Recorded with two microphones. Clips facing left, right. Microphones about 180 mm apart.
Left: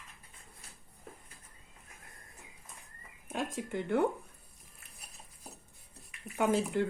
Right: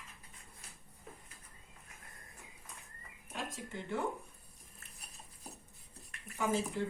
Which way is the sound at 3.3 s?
60° left (ahead or behind).